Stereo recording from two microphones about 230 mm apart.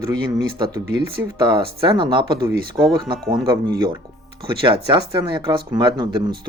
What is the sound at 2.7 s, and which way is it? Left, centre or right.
Speech, centre.